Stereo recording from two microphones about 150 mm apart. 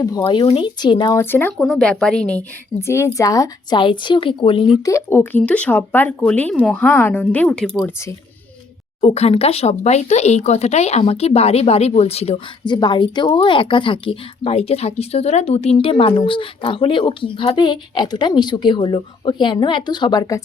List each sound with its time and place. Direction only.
0.0 s speech: 25° left (ahead or behind)
1.1 s a woman's voice: 15° left (ahead or behind)
2.8 s speech: 20° left (ahead or behind); by 4.8 s 35° left (ahead or behind)
4.9 s speech: 15° left (ahead or behind)
9.0 s speech: 45° left (ahead or behind)
12.6 s speech: 30° left (ahead or behind)